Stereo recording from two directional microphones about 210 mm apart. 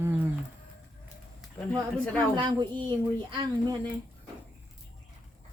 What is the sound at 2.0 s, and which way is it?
Speech, 5° left (ahead or behind).